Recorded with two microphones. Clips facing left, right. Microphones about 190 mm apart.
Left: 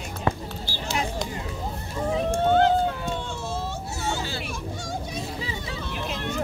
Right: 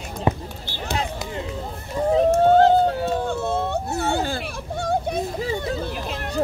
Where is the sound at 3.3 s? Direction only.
60° right (ahead or behind).